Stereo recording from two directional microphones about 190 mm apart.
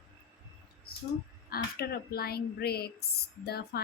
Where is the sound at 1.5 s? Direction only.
55° left (ahead or behind).